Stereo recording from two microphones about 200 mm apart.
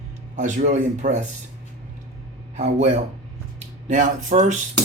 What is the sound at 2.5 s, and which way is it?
Speech, 35° right (ahead or behind).